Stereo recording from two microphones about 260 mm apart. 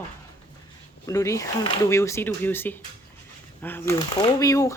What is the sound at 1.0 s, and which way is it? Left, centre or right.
Speech, centre.